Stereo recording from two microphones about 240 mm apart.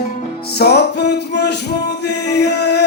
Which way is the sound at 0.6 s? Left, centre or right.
Left.